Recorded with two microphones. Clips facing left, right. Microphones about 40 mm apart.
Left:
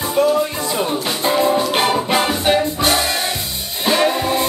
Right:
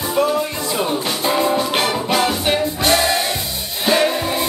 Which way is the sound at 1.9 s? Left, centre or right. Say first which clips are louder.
Left 1 dB; centre.